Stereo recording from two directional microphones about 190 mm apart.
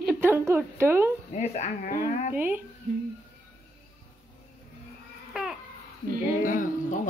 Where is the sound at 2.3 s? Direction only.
10° right (ahead or behind).